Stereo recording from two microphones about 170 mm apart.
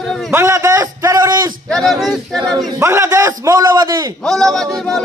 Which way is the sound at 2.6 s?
15° right (ahead or behind).